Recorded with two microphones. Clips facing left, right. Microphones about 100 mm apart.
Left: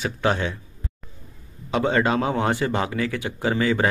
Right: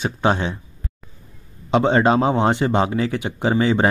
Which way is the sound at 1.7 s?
25° right (ahead or behind).